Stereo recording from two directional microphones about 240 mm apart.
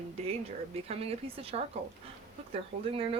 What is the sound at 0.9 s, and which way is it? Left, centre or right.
Speech, right.